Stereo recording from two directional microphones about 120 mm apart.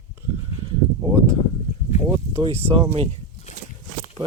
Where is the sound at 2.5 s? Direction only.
60° right (ahead or behind).